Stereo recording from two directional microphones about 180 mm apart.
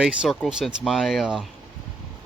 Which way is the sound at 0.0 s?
5° right (ahead or behind).